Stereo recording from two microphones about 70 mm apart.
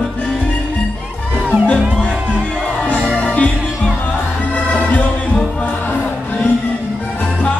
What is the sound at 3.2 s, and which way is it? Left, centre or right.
Music, centre.